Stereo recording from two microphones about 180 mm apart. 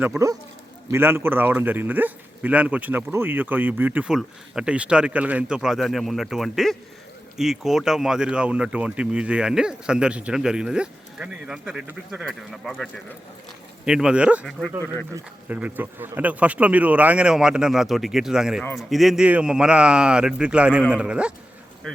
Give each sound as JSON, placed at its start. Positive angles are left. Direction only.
{"t": 0.9, "sound": "speech", "side_deg": -15}